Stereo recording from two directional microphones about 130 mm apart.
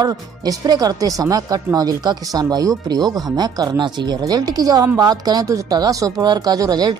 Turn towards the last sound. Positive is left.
turn(degrees=-30)  # may be behind; listen again after turning